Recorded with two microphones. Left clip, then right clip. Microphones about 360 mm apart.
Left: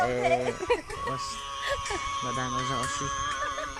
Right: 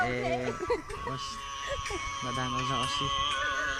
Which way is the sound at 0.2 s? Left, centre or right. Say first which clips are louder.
Left 5 dB; left.